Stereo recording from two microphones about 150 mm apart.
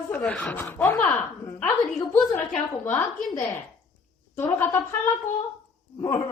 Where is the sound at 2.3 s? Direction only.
15° left (ahead or behind).